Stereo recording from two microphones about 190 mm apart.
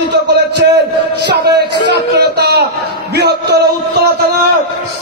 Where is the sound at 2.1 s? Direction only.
60° right (ahead or behind).